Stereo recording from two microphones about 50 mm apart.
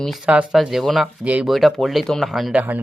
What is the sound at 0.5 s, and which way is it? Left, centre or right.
Speech, centre.